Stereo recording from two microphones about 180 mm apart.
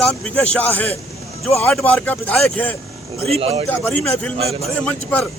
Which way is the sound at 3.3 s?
30° right (ahead or behind).